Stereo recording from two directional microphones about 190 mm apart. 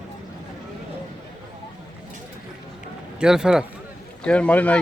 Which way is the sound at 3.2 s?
5° right (ahead or behind).